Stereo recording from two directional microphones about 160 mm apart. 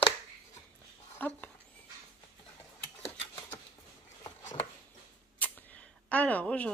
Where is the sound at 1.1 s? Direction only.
10° left (ahead or behind).